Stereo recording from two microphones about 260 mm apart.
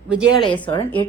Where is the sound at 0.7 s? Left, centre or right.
Centre.